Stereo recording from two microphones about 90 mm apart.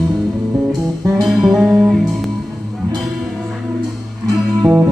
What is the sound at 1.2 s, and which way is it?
Music, centre (ahead or behind).